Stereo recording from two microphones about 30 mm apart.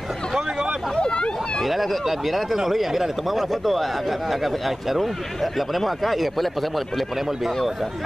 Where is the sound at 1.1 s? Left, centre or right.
Left.